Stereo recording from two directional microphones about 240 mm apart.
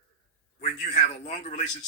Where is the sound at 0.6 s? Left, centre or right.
Left.